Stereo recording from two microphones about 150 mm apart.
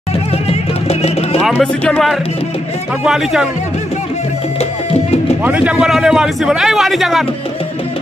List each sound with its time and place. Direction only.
0.8 s music: 45° left (ahead or behind)
1.6 s a man's voice: 5° left (ahead or behind)
5.4 s a man's voice: 10° right (ahead or behind)